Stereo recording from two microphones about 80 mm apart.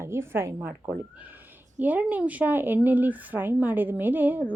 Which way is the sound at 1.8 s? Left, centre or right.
Centre.